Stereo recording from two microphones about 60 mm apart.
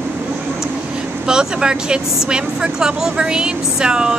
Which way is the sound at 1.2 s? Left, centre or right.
Centre.